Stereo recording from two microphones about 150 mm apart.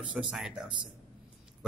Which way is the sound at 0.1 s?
5° right (ahead or behind).